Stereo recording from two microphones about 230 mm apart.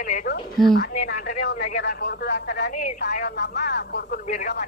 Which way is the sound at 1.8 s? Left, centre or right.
Left.